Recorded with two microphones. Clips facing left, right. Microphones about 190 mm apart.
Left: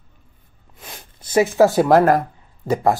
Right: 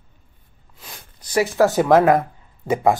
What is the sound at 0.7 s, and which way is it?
Speech, 20° left (ahead or behind).